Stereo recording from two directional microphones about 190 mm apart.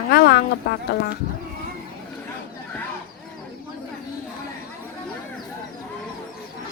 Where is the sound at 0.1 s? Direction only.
55° left (ahead or behind).